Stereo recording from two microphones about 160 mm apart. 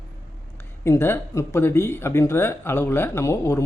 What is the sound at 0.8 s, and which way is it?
Speech, 15° left (ahead or behind).